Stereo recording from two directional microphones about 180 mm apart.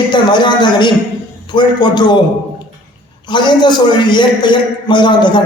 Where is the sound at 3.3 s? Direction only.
25° left (ahead or behind).